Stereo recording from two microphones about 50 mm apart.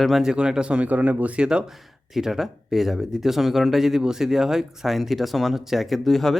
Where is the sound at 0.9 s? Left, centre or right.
Right.